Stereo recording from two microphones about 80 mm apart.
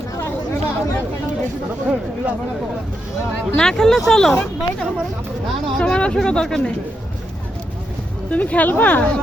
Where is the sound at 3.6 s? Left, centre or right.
Centre.